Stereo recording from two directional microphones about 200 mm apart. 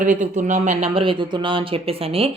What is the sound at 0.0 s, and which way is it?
Speech, 40° right (ahead or behind).